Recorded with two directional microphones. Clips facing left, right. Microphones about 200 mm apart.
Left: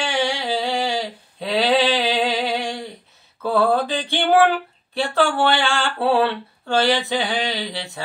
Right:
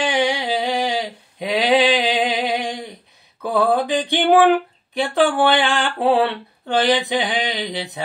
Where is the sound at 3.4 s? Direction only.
15° right (ahead or behind).